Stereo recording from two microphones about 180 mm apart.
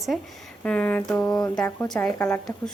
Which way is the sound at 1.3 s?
20° left (ahead or behind).